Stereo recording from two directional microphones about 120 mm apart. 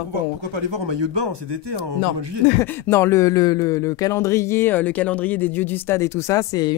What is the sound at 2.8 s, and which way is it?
Speech, 20° left (ahead or behind).